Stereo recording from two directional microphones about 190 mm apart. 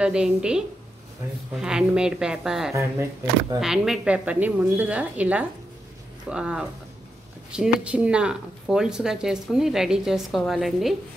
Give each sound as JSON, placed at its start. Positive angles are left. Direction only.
{"t": 0.0, "sound": "speech", "side_deg": -5}
{"t": 2.7, "sound": "a woman's voice", "side_deg": -15}
{"t": 3.5, "sound": "a woman's voice", "side_deg": -5}